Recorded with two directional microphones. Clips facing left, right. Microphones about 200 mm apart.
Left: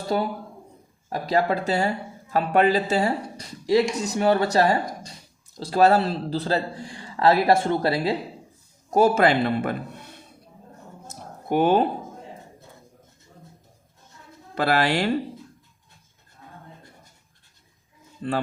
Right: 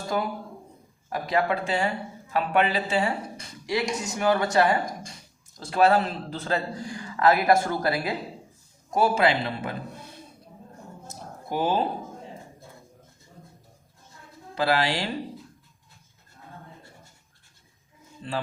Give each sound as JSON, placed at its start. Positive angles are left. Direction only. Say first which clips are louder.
{"t": 0.1, "sound": "a woman's voice", "louder": "left 3 dB", "side_deg": 30}
{"t": 8.9, "sound": "a man's voice", "louder": "left 4 dB", "side_deg": 45}
{"t": 11.4, "sound": "speech", "louder": "left 6 dB", "side_deg": 60}
{"t": 14.5, "sound": "speech", "louder": "left 3 dB", "side_deg": 55}